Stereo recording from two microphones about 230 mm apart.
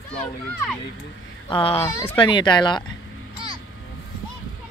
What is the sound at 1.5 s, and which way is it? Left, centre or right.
A child's voice, left.